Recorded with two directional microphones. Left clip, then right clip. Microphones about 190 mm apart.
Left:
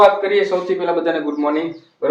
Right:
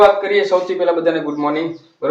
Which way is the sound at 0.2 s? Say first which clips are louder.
Right 2 dB; 5° left (ahead or behind).